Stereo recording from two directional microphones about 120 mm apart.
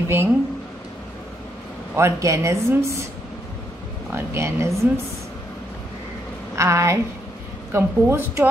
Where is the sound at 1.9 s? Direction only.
25° right (ahead or behind).